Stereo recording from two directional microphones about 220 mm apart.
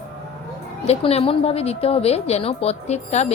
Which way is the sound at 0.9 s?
25° left (ahead or behind).